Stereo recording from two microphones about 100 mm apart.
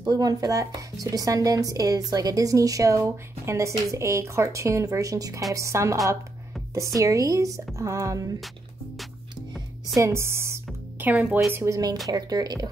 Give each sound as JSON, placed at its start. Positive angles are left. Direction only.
{"t": 0.0, "sound": "a woman's voice", "side_deg": -40}
{"t": 7.0, "sound": "a woman's voice", "side_deg": -35}
{"t": 9.9, "sound": "speech", "side_deg": -30}
{"t": 11.1, "sound": "speech", "side_deg": -15}
{"t": 11.5, "sound": "a woman's voice", "side_deg": -30}